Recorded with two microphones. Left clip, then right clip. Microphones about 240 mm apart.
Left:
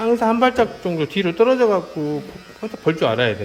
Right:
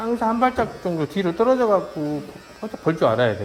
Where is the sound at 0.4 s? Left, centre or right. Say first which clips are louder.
Left 4 dB; centre.